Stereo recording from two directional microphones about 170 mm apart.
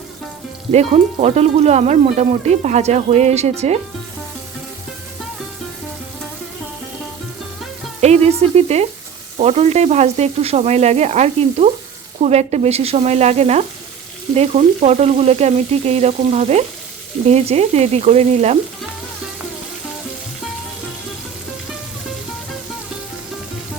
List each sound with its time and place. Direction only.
0.7 s sizzle: 40° right (ahead or behind)
8.0 s sizzle: 40° right (ahead or behind)